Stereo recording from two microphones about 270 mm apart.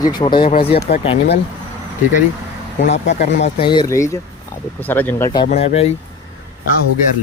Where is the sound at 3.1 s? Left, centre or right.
Left.